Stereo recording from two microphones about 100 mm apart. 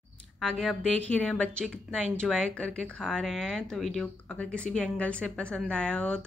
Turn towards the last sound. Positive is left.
turn(degrees=10)  # may be behind; listen again after turning